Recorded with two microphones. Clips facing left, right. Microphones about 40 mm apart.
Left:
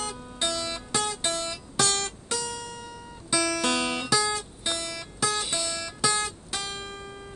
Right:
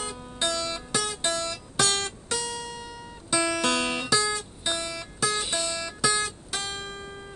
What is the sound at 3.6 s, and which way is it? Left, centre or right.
Music, centre.